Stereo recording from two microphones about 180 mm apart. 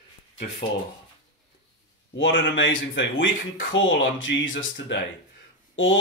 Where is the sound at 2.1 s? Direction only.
90° left.